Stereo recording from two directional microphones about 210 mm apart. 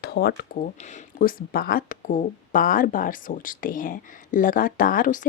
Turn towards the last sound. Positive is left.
turn(degrees=40)  # may be behind; listen again after turning